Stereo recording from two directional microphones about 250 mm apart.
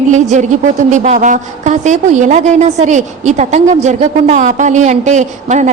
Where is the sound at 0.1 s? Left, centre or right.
Right.